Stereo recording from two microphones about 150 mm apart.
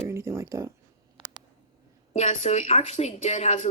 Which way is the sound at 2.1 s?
45° left (ahead or behind).